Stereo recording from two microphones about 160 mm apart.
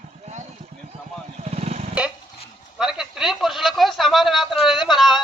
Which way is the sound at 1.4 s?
45° right (ahead or behind).